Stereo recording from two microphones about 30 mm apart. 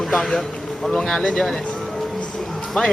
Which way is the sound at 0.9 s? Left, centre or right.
Centre.